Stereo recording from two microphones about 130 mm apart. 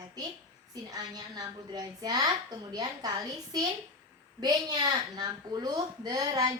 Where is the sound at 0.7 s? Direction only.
30° right (ahead or behind).